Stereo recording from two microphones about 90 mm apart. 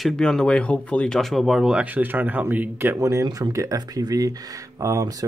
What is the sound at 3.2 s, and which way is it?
Speech, 55° right (ahead or behind).